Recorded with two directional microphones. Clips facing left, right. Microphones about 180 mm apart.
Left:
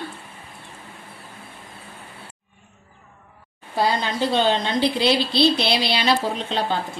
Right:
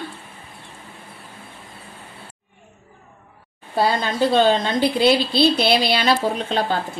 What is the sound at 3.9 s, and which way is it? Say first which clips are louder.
A woman's voice: right 3 dB; 50° right (ahead or behind).